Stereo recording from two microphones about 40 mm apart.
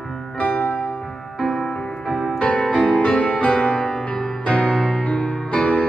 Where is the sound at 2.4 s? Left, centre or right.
Left.